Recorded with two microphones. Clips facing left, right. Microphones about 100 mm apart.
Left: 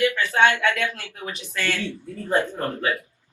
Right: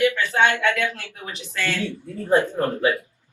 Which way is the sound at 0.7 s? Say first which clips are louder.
Right 2 dB; 20° right (ahead or behind).